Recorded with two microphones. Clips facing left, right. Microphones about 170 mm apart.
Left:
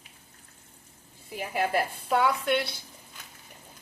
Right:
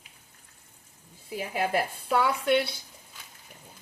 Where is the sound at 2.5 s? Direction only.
55° right (ahead or behind).